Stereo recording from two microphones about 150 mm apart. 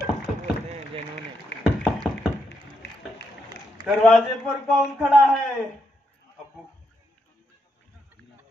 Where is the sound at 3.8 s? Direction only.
Centre (ahead or behind).